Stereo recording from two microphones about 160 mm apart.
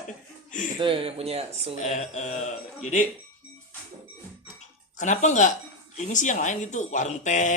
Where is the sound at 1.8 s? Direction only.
50° left (ahead or behind).